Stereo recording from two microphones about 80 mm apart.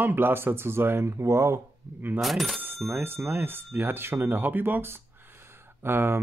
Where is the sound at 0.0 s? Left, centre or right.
Right.